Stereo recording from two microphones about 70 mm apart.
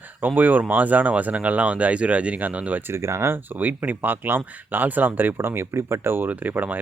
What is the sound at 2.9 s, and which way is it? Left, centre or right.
Speech, right.